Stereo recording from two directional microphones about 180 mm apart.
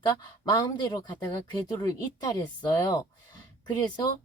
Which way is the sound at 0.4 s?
20° left (ahead or behind).